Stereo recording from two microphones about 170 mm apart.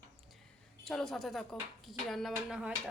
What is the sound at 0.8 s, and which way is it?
A woman's voice, centre (ahead or behind).